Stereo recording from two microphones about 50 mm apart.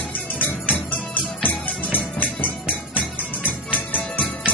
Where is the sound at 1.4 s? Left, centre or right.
Left.